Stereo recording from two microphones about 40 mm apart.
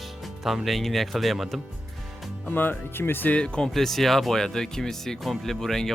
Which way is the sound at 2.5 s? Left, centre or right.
Left.